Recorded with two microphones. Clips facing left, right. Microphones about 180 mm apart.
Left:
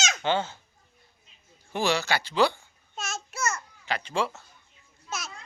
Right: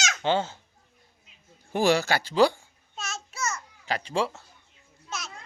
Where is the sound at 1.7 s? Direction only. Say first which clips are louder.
Right 4 dB; 50° right (ahead or behind).